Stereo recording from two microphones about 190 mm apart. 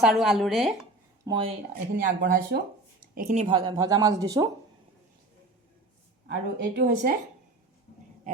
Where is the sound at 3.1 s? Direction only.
40° right (ahead or behind).